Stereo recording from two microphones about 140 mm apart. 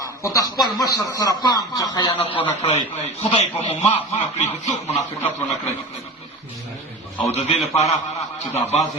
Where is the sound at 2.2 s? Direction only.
40° left (ahead or behind).